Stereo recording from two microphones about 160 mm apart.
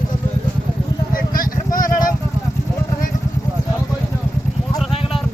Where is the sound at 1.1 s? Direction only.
60° left (ahead or behind).